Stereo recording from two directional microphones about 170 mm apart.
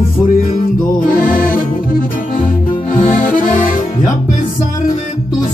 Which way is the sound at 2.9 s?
50° left (ahead or behind).